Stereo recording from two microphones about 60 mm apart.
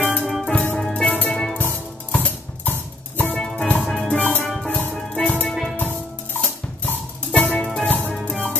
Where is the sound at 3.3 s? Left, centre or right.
Centre.